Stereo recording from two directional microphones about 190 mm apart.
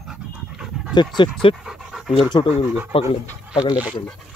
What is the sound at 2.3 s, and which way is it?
Speech, 25° left (ahead or behind).